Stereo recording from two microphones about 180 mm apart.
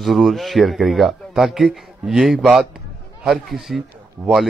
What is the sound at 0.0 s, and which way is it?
Speech, centre (ahead or behind).